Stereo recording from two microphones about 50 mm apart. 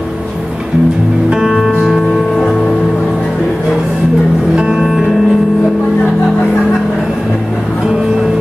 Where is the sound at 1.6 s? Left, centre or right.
Centre.